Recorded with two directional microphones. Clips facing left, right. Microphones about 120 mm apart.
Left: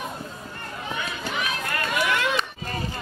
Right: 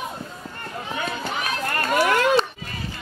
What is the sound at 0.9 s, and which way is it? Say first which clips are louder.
Run: right 3 dB; 40° right (ahead or behind).